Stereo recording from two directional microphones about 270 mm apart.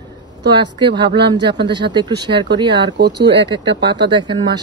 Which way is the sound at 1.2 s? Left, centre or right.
Centre.